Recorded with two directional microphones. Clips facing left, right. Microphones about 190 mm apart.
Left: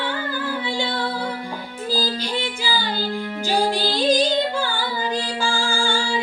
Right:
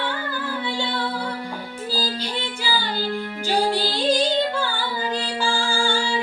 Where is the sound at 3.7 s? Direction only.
15° left (ahead or behind).